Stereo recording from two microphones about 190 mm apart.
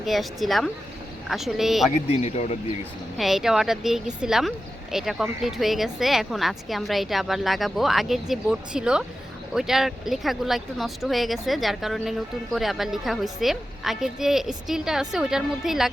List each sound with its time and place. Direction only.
0.0 s speech: centre (ahead or behind)
2.0 s speech: 35° left (ahead or behind)
3.2 s speech: centre (ahead or behind)